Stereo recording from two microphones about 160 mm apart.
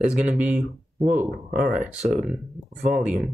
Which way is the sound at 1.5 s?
60° right (ahead or behind).